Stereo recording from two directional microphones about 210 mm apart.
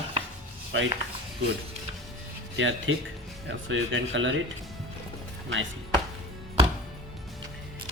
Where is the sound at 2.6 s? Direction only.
65° right (ahead or behind).